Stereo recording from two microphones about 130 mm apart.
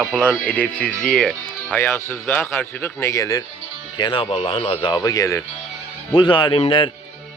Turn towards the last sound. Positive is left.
turn(degrees=40)  # may be behind; listen again after turning